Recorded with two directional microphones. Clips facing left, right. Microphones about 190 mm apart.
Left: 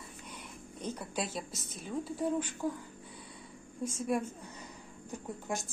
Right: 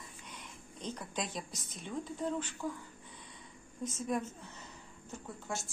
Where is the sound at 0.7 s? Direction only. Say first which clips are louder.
Left 3 dB; 10° left (ahead or behind).